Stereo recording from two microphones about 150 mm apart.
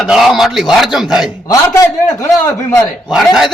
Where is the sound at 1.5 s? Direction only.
20° left (ahead or behind).